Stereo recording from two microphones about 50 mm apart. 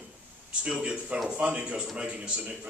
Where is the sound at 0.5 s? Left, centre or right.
Right.